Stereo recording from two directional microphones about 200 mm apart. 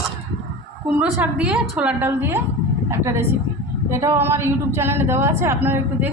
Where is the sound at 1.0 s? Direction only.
5° right (ahead or behind).